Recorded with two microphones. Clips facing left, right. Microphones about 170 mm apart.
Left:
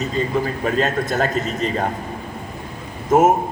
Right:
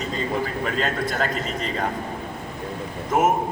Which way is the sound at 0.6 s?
45° left (ahead or behind).